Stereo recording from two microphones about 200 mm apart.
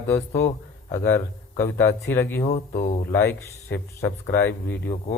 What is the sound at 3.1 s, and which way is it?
Speech, 15° left (ahead or behind).